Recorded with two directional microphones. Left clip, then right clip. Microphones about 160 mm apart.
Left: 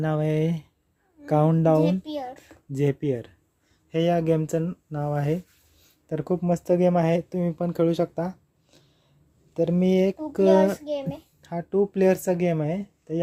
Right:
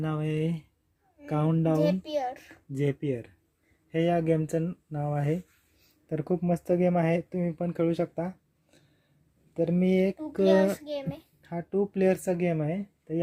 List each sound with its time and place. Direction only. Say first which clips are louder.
0.0 s a child's voice: left 6 dB; 20° left (ahead or behind)